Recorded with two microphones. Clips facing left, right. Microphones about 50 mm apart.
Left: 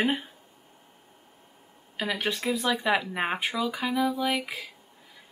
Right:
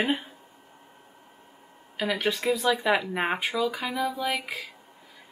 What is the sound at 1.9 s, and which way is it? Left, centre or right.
Speech, centre.